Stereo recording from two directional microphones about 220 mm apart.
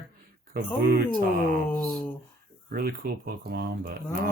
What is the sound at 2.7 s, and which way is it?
Speech, 45° right (ahead or behind).